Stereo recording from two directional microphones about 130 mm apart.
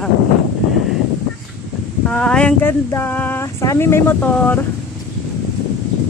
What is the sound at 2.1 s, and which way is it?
Speech, 5° left (ahead or behind).